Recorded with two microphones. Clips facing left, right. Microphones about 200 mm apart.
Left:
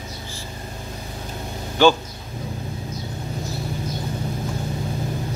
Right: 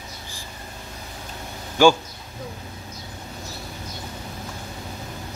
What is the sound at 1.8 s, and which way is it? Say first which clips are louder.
Speech: even; 10° right (ahead or behind).